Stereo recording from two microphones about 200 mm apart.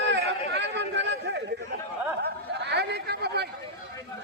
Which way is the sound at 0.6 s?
60° right (ahead or behind).